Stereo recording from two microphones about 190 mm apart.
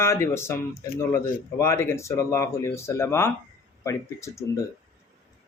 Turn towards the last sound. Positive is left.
turn(degrees=15)  # may be behind; listen again after turning